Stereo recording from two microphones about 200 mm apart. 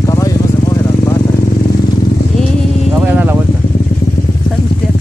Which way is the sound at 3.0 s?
10° right (ahead or behind).